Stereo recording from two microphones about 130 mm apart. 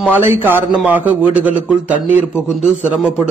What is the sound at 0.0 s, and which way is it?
A man's voice, 15° right (ahead or behind).